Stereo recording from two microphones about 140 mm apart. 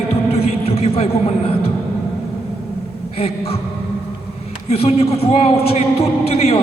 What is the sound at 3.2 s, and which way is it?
Speech, 45° left (ahead or behind).